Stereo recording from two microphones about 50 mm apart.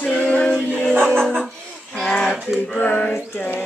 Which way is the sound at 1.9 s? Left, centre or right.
Centre.